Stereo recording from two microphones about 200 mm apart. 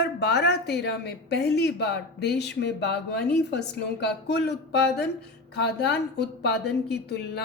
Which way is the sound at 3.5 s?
55° left (ahead or behind).